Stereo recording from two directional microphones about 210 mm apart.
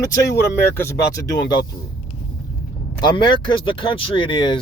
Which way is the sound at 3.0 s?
20° left (ahead or behind).